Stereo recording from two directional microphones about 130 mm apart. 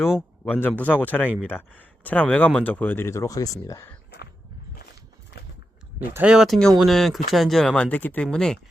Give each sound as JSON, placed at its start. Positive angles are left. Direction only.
{"t": 0.4, "sound": "speech", "side_deg": 15}
{"t": 6.1, "sound": "speech", "side_deg": -5}